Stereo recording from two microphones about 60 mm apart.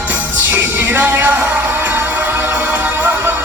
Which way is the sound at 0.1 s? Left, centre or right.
Right.